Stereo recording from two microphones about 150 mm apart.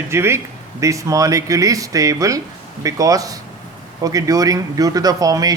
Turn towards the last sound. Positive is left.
turn(degrees=-25)  # may be behind; listen again after turning